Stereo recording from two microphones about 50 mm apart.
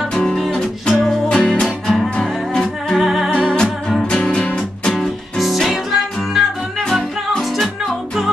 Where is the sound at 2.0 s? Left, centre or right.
Centre.